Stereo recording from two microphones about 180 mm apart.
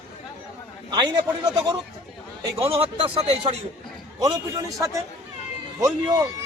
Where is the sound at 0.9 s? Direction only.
25° right (ahead or behind).